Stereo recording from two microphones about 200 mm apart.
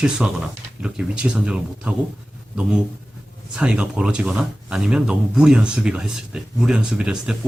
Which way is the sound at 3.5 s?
5° right (ahead or behind).